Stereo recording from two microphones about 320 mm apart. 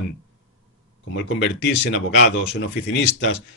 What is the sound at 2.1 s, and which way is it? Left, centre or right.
A man's voice, left.